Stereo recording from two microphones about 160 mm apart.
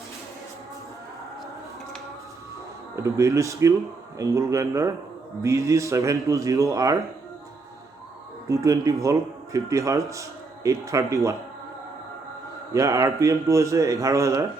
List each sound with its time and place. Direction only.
2.9 s a man's voice: 20° right (ahead or behind)
8.4 s a man's voice: 20° right (ahead or behind)
12.7 s a man's voice: 20° right (ahead or behind)